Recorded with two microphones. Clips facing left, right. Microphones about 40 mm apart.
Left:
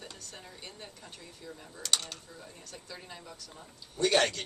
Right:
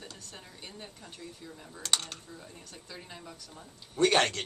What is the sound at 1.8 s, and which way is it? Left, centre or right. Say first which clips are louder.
Speech: right 1 dB; right.